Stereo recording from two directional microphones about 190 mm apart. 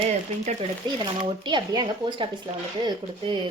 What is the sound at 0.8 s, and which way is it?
A woman's voice, 25° right (ahead or behind).